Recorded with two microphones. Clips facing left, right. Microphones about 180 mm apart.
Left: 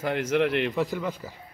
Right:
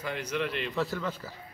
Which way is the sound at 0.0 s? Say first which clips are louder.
Left 8 dB; 55° left (ahead or behind).